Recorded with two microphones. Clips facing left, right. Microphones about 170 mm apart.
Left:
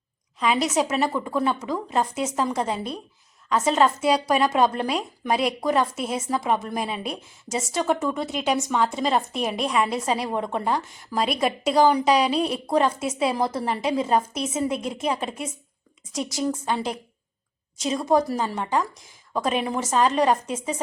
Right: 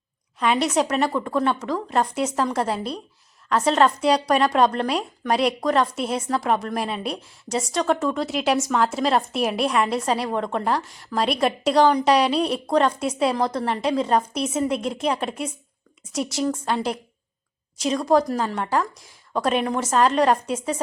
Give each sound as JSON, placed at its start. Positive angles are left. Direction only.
{"t": 0.3, "sound": "a woman's voice", "side_deg": 0}